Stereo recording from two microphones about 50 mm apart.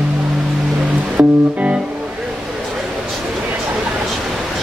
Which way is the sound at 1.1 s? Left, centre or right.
Right.